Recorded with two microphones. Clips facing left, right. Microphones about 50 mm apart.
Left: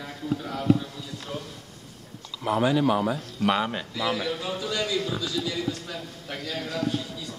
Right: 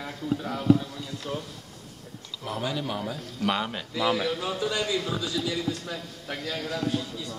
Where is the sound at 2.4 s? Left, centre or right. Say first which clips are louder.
Left 9 dB; centre.